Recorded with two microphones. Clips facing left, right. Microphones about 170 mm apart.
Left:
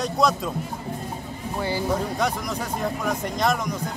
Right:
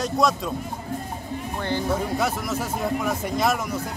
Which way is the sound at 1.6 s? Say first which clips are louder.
Left 1 dB; 10° left (ahead or behind).